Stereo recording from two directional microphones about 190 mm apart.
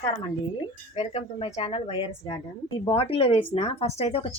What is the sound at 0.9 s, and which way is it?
Speech, 35° left (ahead or behind).